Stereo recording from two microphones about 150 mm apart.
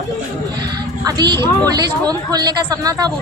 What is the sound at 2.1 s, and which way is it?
A woman's voice, 25° right (ahead or behind).